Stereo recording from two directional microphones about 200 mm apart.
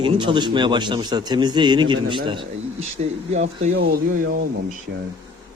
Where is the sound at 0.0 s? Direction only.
25° right (ahead or behind).